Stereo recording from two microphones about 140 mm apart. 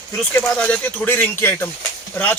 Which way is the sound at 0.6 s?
10° left (ahead or behind).